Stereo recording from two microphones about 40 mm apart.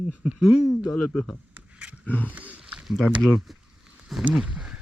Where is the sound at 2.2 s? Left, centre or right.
Right.